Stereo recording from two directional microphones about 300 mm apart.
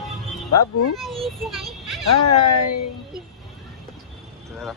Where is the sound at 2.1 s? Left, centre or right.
Left.